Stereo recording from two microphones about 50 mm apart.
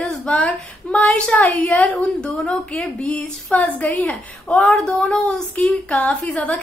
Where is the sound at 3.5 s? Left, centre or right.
Left.